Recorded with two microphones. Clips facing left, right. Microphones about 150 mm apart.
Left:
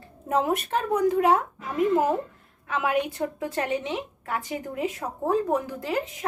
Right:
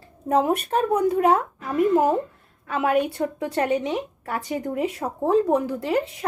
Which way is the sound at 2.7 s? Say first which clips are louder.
Right 4 dB; 30° right (ahead or behind).